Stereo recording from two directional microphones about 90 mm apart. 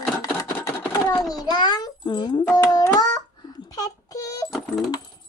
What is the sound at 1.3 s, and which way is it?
A child's voice, 50° left (ahead or behind).